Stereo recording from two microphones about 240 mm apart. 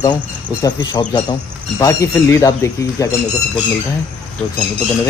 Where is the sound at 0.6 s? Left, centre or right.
Centre.